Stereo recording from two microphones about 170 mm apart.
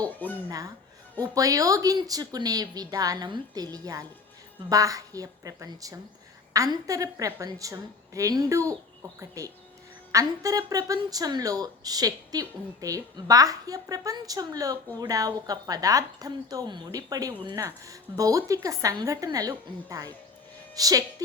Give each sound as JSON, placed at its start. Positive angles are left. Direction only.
{"t": 0.2, "sound": "speech", "side_deg": 10}
{"t": 1.2, "sound": "a woman's voice", "side_deg": -20}